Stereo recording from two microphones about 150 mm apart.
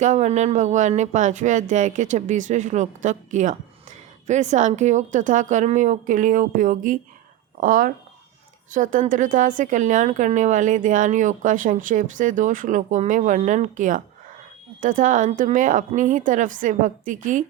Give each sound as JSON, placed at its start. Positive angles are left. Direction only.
{"t": 0.0, "sound": "speech", "side_deg": -50}